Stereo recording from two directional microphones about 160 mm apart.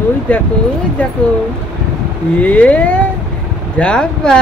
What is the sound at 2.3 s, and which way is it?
Speech, 10° left (ahead or behind).